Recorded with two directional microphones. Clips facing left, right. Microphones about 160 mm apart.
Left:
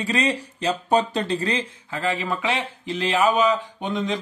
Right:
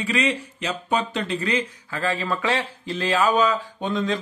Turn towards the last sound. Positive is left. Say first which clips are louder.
# right 1 dB
turn(degrees=20)  # may be behind; listen again after turning